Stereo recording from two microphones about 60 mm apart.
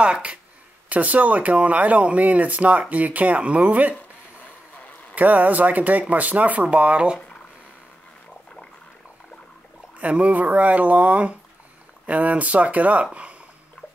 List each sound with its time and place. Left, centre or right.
0.0 s speech: centre
5.1 s speech: right
9.9 s speech: right